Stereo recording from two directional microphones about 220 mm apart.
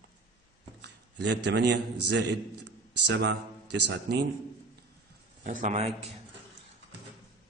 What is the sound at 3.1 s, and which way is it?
A man's voice, 50° right (ahead or behind).